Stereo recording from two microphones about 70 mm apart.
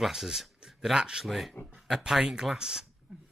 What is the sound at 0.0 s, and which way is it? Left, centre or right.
Speech, centre.